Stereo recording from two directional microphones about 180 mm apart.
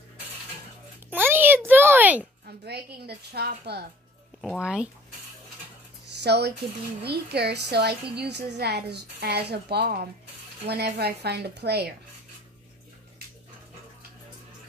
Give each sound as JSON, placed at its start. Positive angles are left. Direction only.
{"t": 1.1, "sound": "a sound", "side_deg": -10}
{"t": 2.4, "sound": "a woman's voice", "side_deg": -65}
{"t": 4.4, "sound": "speech", "side_deg": 0}
{"t": 6.2, "sound": "a woman's voice", "side_deg": -70}